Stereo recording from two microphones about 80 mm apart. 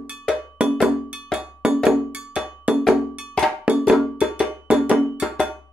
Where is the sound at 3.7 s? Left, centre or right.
Centre.